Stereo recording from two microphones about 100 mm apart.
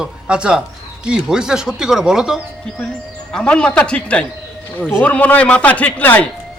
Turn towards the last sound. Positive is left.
turn(degrees=15)  # may be behind; listen again after turning